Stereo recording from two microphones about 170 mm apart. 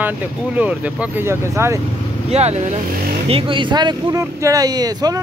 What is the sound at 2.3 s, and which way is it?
Speech, 40° right (ahead or behind).